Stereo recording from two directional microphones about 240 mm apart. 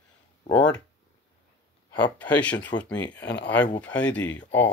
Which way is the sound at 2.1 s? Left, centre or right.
Centre.